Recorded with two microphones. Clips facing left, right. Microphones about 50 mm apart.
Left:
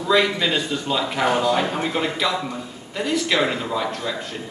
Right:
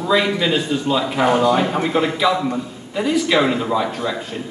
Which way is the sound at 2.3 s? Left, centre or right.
Centre.